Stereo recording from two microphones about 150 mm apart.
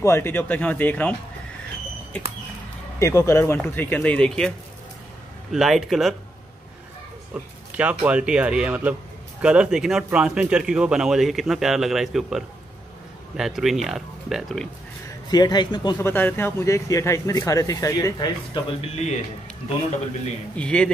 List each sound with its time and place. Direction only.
0.0 s speech: 15° left (ahead or behind)
3.0 s speech: 20° left (ahead or behind); by 6.1 s centre (ahead or behind)
7.3 s speech: 10° right (ahead or behind)
15.0 s speech: 25° left (ahead or behind)
16.0 s speech: 15° left (ahead or behind)
20.5 s speech: 5° left (ahead or behind)